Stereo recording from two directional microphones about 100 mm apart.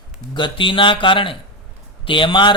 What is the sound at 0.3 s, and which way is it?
A man's voice, 55° left (ahead or behind).